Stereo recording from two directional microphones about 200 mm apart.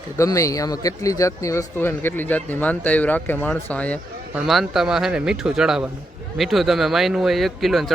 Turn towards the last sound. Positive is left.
turn(degrees=0)  # may be behind; listen again after turning